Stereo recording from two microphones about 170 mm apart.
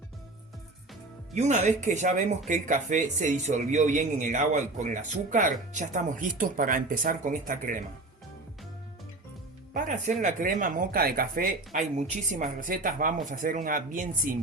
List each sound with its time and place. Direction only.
1.3 s a man's voice: 45° right (ahead or behind)
9.7 s a man's voice: 45° right (ahead or behind)